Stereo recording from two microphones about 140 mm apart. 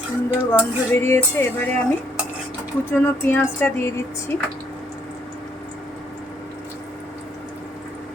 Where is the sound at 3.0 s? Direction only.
15° left (ahead or behind).